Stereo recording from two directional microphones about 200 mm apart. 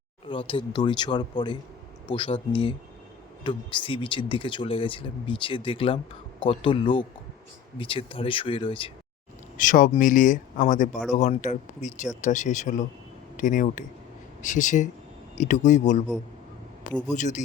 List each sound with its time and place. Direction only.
0.3 s speech: 25° left (ahead or behind)
9.6 s speech: 40° left (ahead or behind)
17.1 s speech: 35° left (ahead or behind)